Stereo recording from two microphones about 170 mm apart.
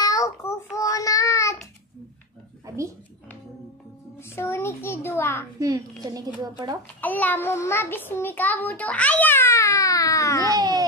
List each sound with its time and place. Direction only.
0.0 s child singing: 20° left (ahead or behind)
2.6 s speech: 15° right (ahead or behind)
4.2 s a child's voice: 15° left (ahead or behind)
5.6 s speech: 20° right (ahead or behind)
7.0 s a child's voice: 10° left (ahead or behind)
10.4 s speech: 25° right (ahead or behind)